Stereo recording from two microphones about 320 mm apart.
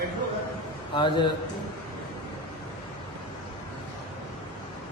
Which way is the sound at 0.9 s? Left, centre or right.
Centre.